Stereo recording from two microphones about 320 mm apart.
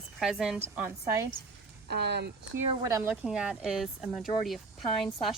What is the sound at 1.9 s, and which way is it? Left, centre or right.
Speech, right.